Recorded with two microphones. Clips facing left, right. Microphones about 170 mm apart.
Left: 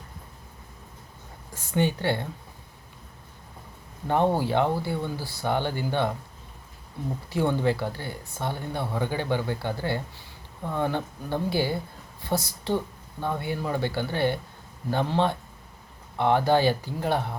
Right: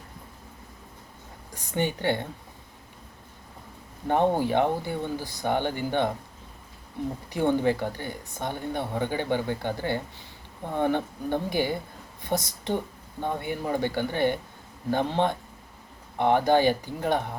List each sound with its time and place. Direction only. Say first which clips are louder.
1.5 s speech: left 2 dB; 20° right (ahead or behind)
4.0 s speech: even; 15° right (ahead or behind)
7.3 s a woman's voice: right 1 dB; 15° right (ahead or behind)